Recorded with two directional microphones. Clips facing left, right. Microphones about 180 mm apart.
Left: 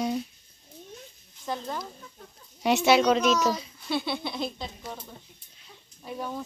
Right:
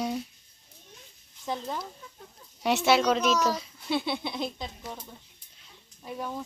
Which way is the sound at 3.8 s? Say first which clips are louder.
Even; 25° right (ahead or behind).